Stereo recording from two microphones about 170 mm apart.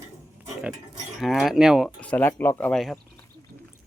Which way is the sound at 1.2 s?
Centre (ahead or behind).